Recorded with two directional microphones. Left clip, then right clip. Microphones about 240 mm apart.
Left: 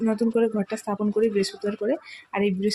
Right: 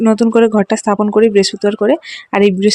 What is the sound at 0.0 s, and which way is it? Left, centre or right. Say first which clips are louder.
Speech: right 12 dB; right.